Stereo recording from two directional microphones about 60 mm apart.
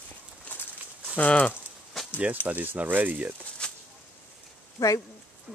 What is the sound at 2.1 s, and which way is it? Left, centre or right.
Speech, right.